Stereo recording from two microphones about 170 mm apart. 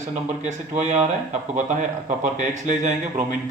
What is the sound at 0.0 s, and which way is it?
Speech, 45° right (ahead or behind).